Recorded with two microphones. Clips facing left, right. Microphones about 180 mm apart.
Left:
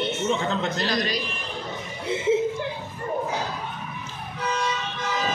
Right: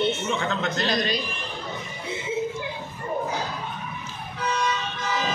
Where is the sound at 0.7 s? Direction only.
25° right (ahead or behind).